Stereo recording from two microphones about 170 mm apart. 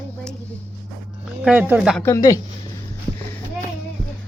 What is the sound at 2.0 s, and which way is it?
Speech, 15° left (ahead or behind).